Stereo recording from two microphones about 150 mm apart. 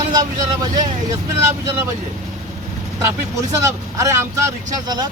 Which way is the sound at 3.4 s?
20° right (ahead or behind).